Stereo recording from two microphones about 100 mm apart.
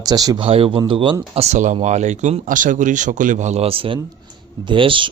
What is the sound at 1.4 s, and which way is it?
Speech, 90° right.